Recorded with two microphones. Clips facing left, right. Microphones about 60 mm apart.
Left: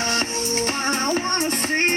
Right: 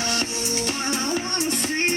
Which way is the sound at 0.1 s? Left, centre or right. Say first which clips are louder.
Left 3 dB; left.